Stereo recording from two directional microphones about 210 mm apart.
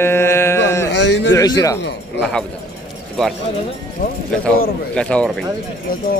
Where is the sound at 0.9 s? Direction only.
55° left (ahead or behind).